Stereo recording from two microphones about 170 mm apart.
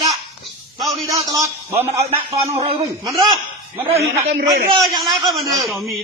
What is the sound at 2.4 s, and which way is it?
Speech, 15° right (ahead or behind).